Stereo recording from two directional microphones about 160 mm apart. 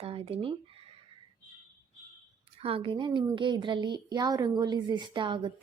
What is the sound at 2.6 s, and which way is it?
A woman's voice, 35° right (ahead or behind).